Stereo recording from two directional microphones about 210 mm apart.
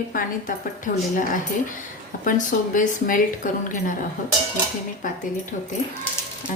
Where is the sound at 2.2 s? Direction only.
40° left (ahead or behind).